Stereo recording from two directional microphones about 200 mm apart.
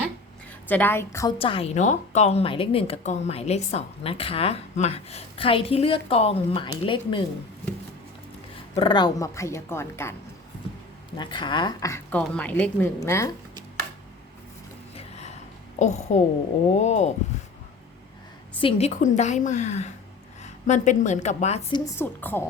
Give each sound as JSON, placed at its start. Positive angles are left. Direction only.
{"t": 0.7, "sound": "speech", "side_deg": 10}
{"t": 1.4, "sound": "speech", "side_deg": 30}
{"t": 8.7, "sound": "speech", "side_deg": 25}
{"t": 11.2, "sound": "speech", "side_deg": 25}
{"t": 15.8, "sound": "a woman's voice", "side_deg": 35}
{"t": 18.6, "sound": "a woman's voice", "side_deg": 35}
{"t": 21.7, "sound": "speech", "side_deg": 15}